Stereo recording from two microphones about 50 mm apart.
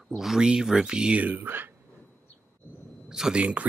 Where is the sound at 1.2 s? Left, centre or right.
Right.